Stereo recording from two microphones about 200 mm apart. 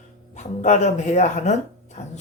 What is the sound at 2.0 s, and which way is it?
Music, 35° left (ahead or behind).